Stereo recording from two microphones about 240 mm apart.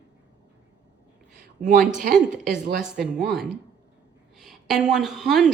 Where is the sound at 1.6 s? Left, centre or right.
Right.